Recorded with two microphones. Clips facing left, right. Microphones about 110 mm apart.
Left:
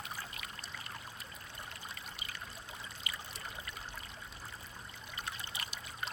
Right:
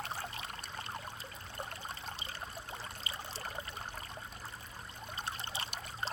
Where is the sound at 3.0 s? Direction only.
30° right (ahead or behind).